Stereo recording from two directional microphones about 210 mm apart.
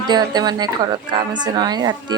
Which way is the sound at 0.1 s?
20° right (ahead or behind).